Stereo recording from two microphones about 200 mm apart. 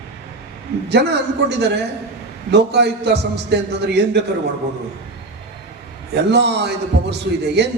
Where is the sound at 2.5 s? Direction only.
55° right (ahead or behind).